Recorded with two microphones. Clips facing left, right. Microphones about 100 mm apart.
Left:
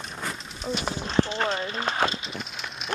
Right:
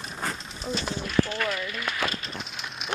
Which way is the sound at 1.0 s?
25° left (ahead or behind).